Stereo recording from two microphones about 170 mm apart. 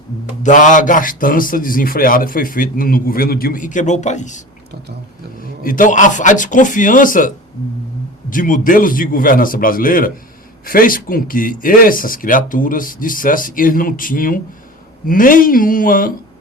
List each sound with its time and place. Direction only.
0.4 s a man's voice: 50° left (ahead or behind)